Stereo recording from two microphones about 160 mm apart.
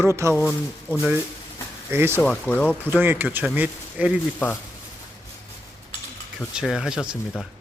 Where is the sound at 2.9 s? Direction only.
10° right (ahead or behind).